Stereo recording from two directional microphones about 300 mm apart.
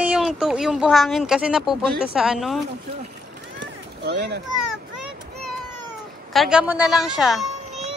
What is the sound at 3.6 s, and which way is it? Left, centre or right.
Run, right.